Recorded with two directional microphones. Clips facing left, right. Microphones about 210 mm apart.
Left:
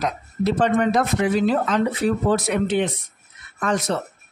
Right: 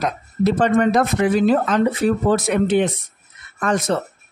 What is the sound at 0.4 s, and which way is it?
Speech, 50° right (ahead or behind).